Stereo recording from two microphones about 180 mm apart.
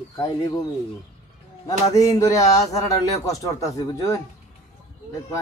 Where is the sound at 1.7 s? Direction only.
20° left (ahead or behind).